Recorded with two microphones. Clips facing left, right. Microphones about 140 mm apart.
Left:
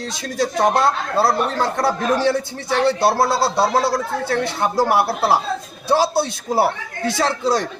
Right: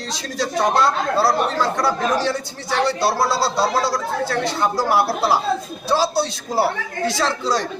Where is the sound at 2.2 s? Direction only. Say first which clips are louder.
Left 4 dB; 55° left (ahead or behind).